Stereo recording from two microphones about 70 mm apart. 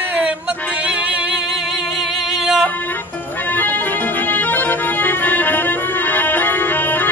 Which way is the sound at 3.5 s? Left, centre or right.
Left.